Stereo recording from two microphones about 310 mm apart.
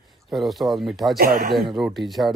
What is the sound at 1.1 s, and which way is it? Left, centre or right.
Speech, right.